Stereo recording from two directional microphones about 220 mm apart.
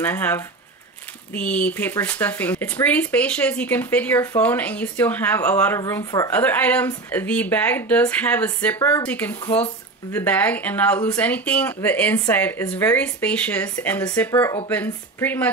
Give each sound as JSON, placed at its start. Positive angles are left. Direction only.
{"t": 0.0, "sound": "speech", "side_deg": 10}